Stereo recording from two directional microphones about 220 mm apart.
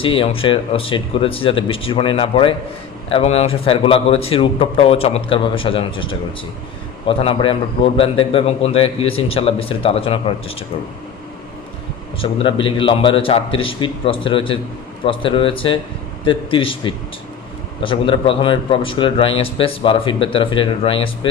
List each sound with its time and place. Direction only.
0.0 s a man's voice: 25° left (ahead or behind)
12.2 s a man's voice: 25° left (ahead or behind)